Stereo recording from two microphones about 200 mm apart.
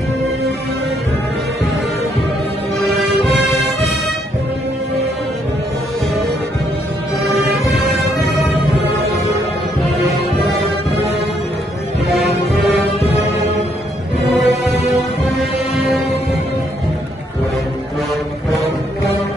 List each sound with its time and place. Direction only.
7.7 s music: centre (ahead or behind)
14.4 s music: 35° left (ahead or behind)